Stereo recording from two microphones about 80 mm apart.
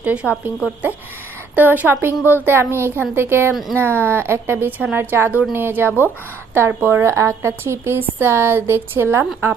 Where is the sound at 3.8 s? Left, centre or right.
Right.